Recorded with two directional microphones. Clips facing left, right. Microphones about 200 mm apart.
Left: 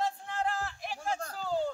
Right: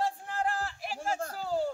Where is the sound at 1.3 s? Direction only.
5° right (ahead or behind).